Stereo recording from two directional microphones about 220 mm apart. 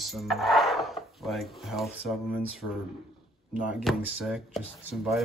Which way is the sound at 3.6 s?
Centre (ahead or behind).